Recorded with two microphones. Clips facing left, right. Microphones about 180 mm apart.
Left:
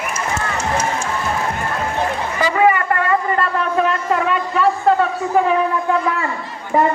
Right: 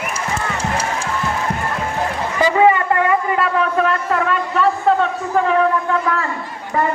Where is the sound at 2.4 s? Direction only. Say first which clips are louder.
Right 2 dB; 20° right (ahead or behind).